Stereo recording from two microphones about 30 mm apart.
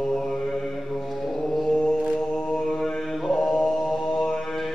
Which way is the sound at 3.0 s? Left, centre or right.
Centre.